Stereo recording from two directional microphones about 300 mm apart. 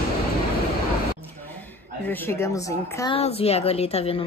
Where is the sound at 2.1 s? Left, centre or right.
Centre.